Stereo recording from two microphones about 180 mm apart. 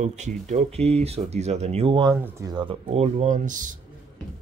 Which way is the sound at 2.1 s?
15° right (ahead or behind).